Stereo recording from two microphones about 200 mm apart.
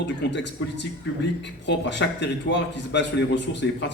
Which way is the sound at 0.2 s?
60° left (ahead or behind).